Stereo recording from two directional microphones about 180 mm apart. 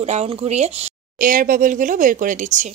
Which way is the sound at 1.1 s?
50° right (ahead or behind).